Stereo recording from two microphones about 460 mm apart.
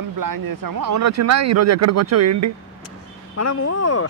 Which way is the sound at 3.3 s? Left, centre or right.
Left.